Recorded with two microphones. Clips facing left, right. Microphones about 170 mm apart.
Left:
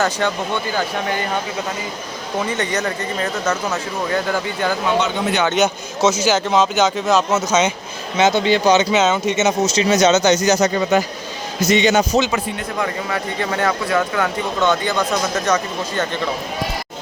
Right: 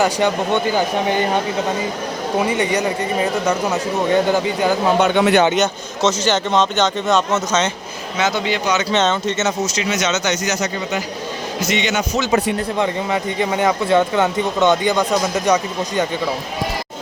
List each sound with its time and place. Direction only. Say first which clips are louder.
0.0 s speech: right 3 dB; 15° right (ahead or behind)
2.5 s speech: right 3 dB; 10° right (ahead or behind)
4.9 s speech: right 5 dB; 65° right (ahead or behind)
5.5 s a man's voice: left 1 dB; 5° left (ahead or behind)
8.2 s speech: left 5 dB; 25° left (ahead or behind)
8.9 s speech: left 1 dB; 5° left (ahead or behind)
9.6 s speech: left 6 dB; 30° left (ahead or behind)
11.7 s speech: left 6 dB; 35° left (ahead or behind)
12.8 s speech: right 1 dB; 20° right (ahead or behind)